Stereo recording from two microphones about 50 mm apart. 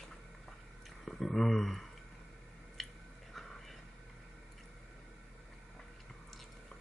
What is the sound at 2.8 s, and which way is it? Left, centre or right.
Chewing, centre.